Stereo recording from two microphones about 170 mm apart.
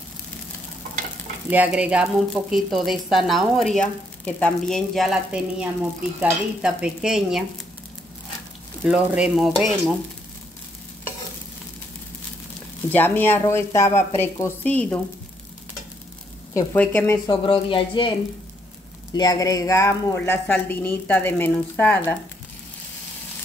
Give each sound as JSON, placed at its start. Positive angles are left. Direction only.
{"t": 1.5, "sound": "a woman's voice", "side_deg": -10}
{"t": 8.8, "sound": "a woman's voice", "side_deg": -5}
{"t": 12.9, "sound": "a woman's voice", "side_deg": 10}
{"t": 16.7, "sound": "a woman's voice", "side_deg": 10}
{"t": 17.3, "sound": "speech", "side_deg": 30}
{"t": 19.1, "sound": "a woman's voice", "side_deg": 20}